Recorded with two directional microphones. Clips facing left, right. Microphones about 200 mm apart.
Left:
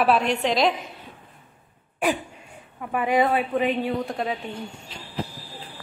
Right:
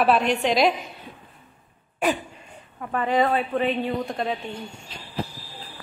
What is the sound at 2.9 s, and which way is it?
Speech, 10° left (ahead or behind).